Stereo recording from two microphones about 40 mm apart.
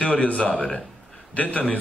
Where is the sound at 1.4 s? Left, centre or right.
Left.